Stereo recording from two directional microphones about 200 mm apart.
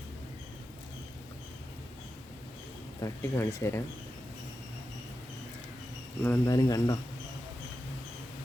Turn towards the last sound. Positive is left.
turn(degrees=20)  # may be behind; listen again after turning